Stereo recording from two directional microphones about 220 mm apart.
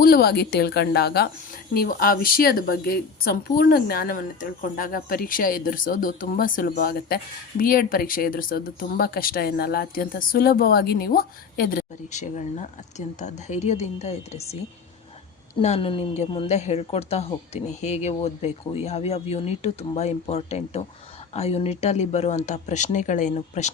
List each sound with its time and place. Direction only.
0.0 s a woman's voice: 45° left (ahead or behind)